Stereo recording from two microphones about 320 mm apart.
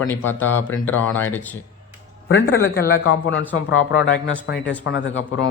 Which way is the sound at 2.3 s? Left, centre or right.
Left.